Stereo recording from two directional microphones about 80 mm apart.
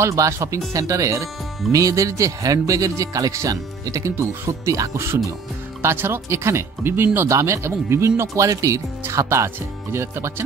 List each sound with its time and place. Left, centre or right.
0.0 s speech: right
4.1 s speech: right
4.5 s speech: right
7.2 s speech: right